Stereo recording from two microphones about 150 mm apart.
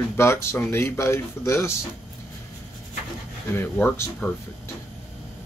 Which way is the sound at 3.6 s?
15° left (ahead or behind).